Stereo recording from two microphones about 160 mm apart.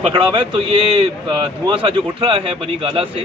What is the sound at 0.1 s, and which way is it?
A man's voice, 30° right (ahead or behind).